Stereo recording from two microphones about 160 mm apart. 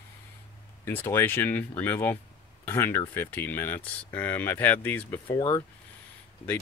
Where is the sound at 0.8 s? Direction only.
15° left (ahead or behind).